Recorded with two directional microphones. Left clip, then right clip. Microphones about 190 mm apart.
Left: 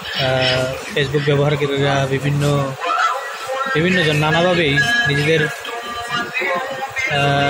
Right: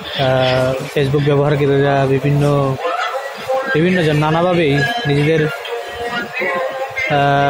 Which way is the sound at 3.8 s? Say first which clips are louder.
Right 1 dB; 25° right (ahead or behind).